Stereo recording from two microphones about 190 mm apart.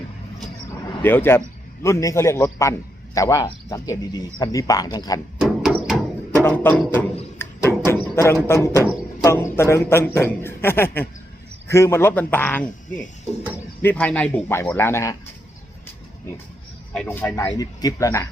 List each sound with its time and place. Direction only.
1.0 s a man's voice: 10° left (ahead or behind)
5.4 s a sound: centre (ahead or behind)
6.4 s a man's voice: 10° left (ahead or behind)
7.3 s a sound: 15° left (ahead or behind)
8.1 s a man's voice: 15° left (ahead or behind)
17.1 s a man's voice: 15° left (ahead or behind)